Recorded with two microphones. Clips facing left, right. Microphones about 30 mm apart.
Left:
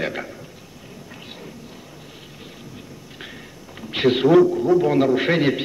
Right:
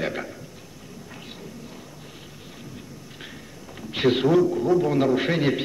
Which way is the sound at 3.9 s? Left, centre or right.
Centre.